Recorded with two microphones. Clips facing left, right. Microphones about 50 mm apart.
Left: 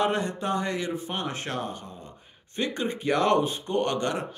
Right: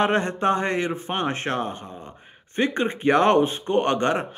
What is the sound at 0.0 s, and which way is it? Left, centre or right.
A man's voice, right.